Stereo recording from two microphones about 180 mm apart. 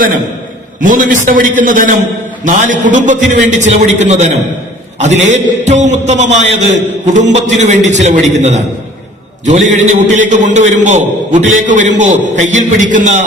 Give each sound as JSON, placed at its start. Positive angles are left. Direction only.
{"t": 0.8, "sound": "a man's voice", "side_deg": -45}